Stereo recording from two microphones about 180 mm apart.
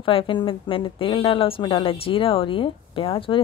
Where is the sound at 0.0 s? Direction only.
30° left (ahead or behind).